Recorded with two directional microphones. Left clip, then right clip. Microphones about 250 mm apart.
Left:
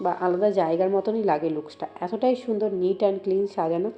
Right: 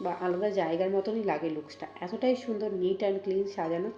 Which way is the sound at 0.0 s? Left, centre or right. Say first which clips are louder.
Left 7 dB; centre.